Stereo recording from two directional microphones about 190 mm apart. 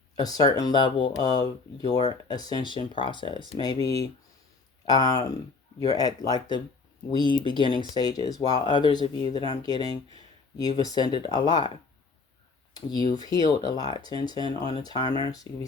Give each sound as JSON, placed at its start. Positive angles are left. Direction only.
{"t": 0.2, "sound": "speech", "side_deg": 20}
{"t": 13.1, "sound": "speech", "side_deg": 20}